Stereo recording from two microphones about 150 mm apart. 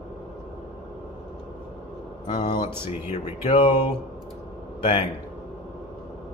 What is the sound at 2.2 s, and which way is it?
Mantra, 30° left (ahead or behind).